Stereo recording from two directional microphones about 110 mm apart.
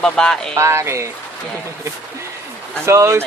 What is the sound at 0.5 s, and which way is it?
Speech, 25° right (ahead or behind).